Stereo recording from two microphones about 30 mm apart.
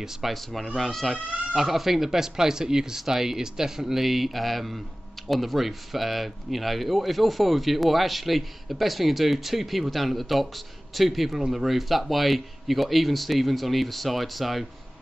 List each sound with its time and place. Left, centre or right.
0.2 s speech: centre
1.5 s speech: centre